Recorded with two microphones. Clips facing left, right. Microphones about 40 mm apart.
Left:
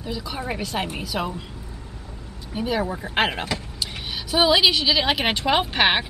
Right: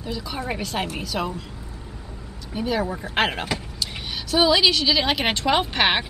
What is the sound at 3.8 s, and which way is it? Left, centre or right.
A woman's voice, centre.